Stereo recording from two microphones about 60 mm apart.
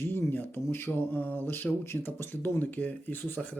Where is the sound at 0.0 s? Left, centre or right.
Left.